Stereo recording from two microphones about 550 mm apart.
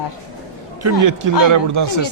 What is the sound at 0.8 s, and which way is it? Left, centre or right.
Speech, right.